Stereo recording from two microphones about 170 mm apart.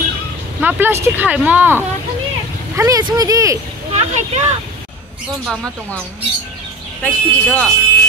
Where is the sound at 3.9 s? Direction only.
40° right (ahead or behind).